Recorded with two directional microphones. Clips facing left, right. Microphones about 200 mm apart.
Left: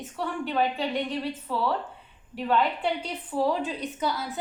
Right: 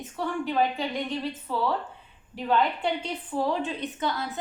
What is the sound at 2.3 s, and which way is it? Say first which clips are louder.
A woman's voice: even; 5° left (ahead or behind).